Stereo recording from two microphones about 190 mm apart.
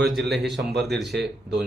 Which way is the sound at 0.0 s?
Centre (ahead or behind).